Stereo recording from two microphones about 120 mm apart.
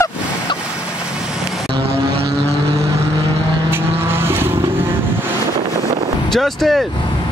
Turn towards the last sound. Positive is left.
turn(degrees=0)  # may be behind; listen again after turning